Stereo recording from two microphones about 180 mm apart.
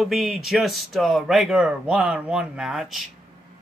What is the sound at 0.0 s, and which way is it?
Speech, centre (ahead or behind).